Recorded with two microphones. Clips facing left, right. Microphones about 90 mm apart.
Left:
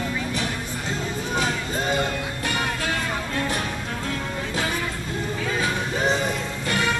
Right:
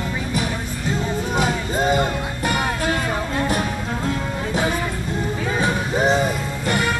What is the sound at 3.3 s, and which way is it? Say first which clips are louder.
Music: right 5 dB; 10° right (ahead or behind).